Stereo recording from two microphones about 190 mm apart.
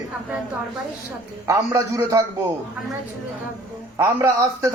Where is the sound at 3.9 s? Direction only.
15° right (ahead or behind).